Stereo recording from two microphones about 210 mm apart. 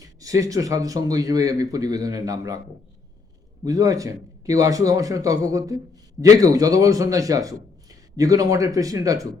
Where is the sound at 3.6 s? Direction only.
15° right (ahead or behind).